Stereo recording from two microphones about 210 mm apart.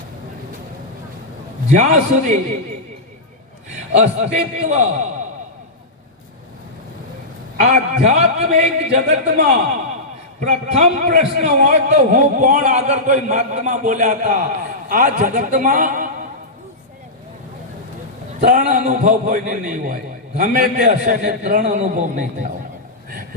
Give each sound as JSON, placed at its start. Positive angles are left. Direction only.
{"t": 1.7, "sound": "a man's voice", "side_deg": -35}
{"t": 3.9, "sound": "a man's voice", "side_deg": -30}
{"t": 7.6, "sound": "a man's voice", "side_deg": -35}
{"t": 18.3, "sound": "a man's voice", "side_deg": -40}